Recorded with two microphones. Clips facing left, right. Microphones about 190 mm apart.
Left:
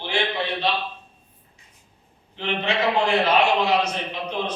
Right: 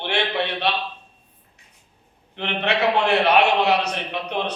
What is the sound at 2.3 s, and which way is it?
A man's voice, 65° right (ahead or behind).